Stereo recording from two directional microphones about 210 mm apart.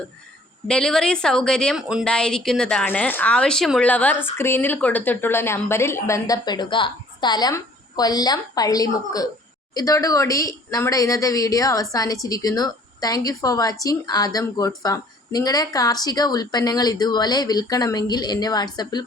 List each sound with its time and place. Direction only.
0.7 s a woman's voice: 5° left (ahead or behind); by 19.0 s 20° left (ahead or behind)